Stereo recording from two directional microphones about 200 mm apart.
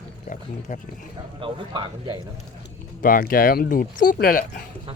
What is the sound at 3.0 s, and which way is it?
Speech, 45° left (ahead or behind).